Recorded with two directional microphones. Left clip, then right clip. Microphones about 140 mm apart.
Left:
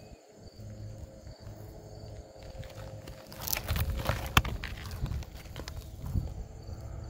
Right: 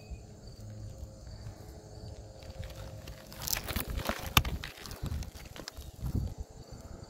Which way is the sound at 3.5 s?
65° left (ahead or behind).